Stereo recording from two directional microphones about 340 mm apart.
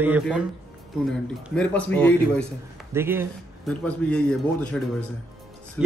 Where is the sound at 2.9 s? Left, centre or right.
Centre.